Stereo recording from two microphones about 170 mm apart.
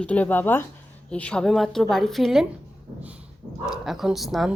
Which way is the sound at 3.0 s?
10° right (ahead or behind).